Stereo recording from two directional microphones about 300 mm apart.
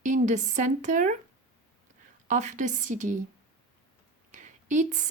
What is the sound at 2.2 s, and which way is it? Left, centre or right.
Speech, right.